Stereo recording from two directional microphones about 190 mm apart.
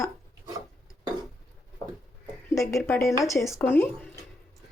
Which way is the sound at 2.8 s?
15° left (ahead or behind).